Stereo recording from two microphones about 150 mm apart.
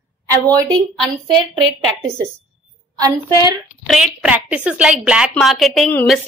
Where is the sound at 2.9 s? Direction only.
25° right (ahead or behind).